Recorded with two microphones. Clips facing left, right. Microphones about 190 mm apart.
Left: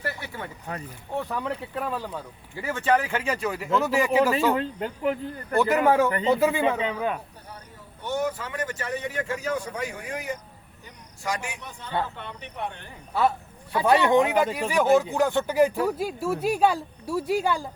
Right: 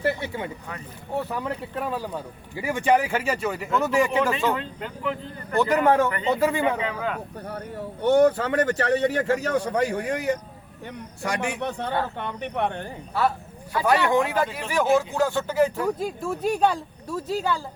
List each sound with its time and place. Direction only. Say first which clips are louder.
0.0 s speech: right 7 dB; 20° right (ahead or behind)
1.2 s speech: left 1 dB; 5° right (ahead or behind)
4.5 s speech: left 4 dB; 45° left (ahead or behind)
5.5 s speech: right 1 dB; 10° left (ahead or behind)
6.7 s speech: left 1 dB; 20° left (ahead or behind)
7.4 s speech: right 12 dB; 65° right (ahead or behind)
11.2 s a man's voice: right 5 dB; 60° right (ahead or behind)
13.7 s speech: left 1 dB; 20° left (ahead or behind)